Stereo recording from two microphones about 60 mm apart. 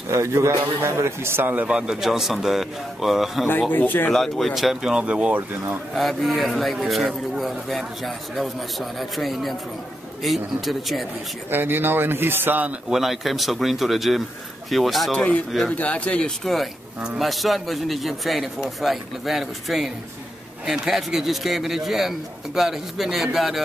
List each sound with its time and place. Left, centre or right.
0.1 s a man's voice: right
1.7 s speech: centre
3.7 s speech: left
4.1 s speech: centre
5.9 s speech: centre
11.5 s speech: right
12.9 s speech: centre
15.1 s a man's voice: centre
17.2 s speech: centre